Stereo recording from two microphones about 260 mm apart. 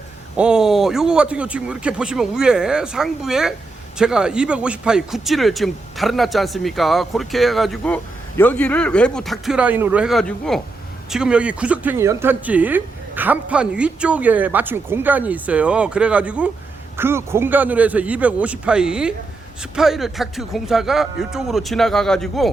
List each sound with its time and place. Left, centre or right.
0.3 s a man's voice: centre